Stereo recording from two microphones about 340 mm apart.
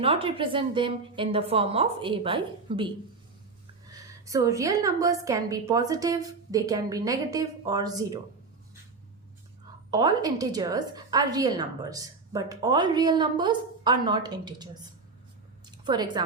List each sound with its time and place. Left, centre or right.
0.0 s a woman's voice: centre
4.3 s a woman's voice: centre
9.9 s a woman's voice: centre
15.6 s a sound: centre